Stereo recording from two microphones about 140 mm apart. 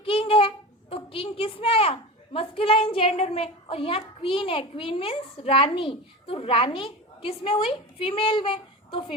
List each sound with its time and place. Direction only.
0.0 s a child's voice: 40° left (ahead or behind)